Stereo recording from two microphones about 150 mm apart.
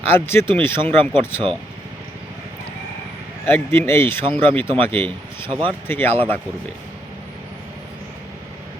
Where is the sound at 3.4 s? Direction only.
15° left (ahead or behind).